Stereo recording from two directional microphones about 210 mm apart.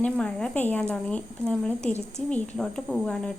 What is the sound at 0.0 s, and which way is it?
Speech, 5° left (ahead or behind).